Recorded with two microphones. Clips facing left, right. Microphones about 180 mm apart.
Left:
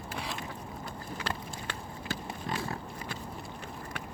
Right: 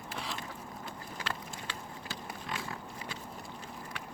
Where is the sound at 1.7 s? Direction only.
50° left (ahead or behind).